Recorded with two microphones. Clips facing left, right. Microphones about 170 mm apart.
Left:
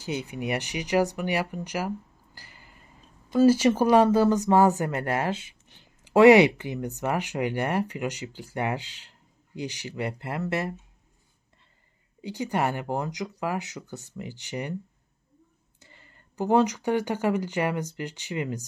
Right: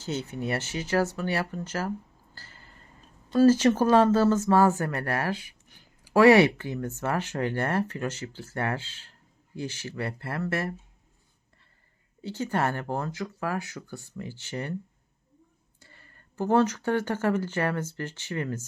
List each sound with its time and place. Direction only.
0.0 s speech: 15° left (ahead or behind)
12.2 s speech: 15° left (ahead or behind)
15.8 s speech: 20° left (ahead or behind)